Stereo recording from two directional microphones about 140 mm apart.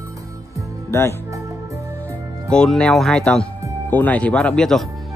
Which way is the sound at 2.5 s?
5° left (ahead or behind).